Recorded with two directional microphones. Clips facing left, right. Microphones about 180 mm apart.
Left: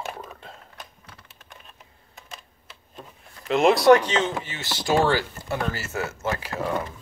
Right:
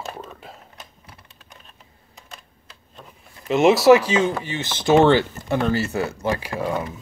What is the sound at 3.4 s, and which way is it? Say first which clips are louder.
Speech: right 3 dB; centre (ahead or behind).